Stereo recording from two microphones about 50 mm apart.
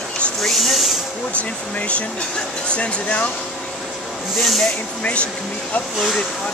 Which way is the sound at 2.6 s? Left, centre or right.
Left.